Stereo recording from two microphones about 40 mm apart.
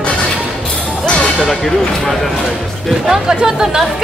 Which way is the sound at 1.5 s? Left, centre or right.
Centre.